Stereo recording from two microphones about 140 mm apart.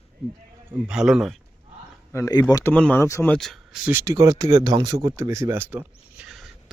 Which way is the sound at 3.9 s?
20° right (ahead or behind).